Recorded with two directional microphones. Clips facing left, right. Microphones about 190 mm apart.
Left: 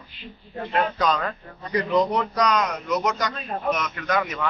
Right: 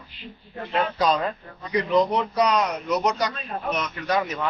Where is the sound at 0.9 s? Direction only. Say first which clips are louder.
Right 1 dB; 35° right (ahead or behind).